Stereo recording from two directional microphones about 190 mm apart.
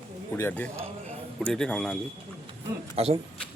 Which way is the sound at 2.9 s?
30° right (ahead or behind).